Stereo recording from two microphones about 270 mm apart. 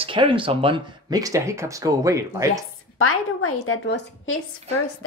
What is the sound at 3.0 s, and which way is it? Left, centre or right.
A woman's voice, left.